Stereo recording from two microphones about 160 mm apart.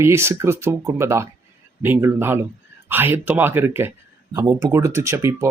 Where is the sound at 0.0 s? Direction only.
15° right (ahead or behind).